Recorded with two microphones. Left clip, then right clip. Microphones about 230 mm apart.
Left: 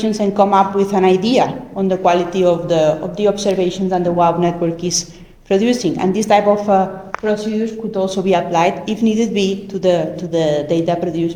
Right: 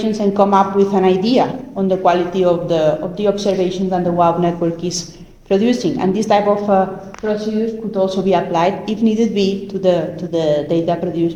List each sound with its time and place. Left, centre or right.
0.0 s a woman's voice: left
7.9 s a woman's voice: left